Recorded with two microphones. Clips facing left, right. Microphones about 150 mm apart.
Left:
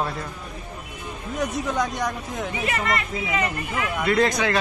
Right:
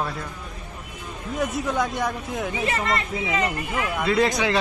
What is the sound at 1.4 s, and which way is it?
Speech, 5° right (ahead or behind).